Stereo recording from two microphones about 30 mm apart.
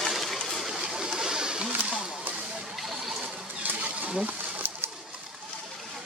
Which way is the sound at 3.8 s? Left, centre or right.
Right.